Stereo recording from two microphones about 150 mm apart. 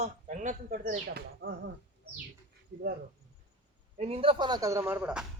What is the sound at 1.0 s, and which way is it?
Speech, 90° right.